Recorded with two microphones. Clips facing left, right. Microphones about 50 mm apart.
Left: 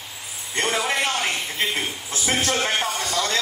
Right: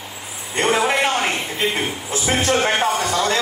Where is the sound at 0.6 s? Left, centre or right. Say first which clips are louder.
Right 5 dB; right.